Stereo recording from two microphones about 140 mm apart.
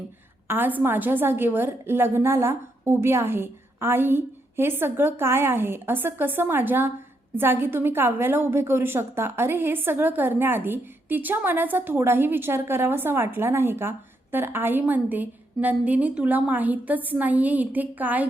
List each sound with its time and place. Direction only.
0.4 s a woman's voice: 15° right (ahead or behind)